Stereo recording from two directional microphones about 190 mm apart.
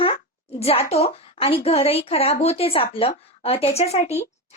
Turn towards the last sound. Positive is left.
turn(degrees=35)  # may be behind; listen again after turning